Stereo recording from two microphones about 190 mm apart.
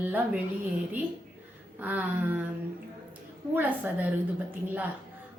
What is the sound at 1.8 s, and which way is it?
Speech, 10° right (ahead or behind).